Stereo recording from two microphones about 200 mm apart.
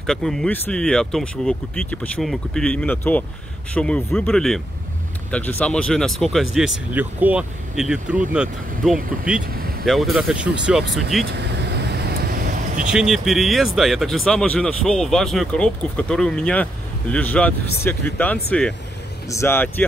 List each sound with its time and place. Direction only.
0.0 s speech: centre (ahead or behind)
11.9 s vehicle: 50° right (ahead or behind)
12.9 s speech: centre (ahead or behind)